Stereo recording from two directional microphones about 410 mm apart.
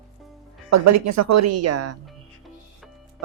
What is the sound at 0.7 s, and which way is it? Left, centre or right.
A woman's voice, right.